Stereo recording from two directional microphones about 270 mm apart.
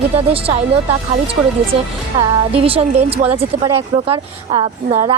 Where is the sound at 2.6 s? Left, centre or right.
Right.